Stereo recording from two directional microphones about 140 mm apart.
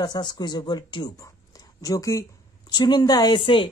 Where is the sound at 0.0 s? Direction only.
30° left (ahead or behind).